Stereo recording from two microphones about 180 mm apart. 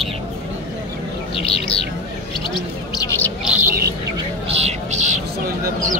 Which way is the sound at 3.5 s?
10° right (ahead or behind).